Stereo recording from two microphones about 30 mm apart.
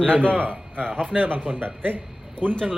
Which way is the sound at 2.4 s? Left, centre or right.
Right.